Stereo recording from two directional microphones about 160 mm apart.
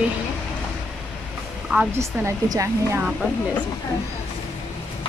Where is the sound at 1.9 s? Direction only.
15° right (ahead or behind).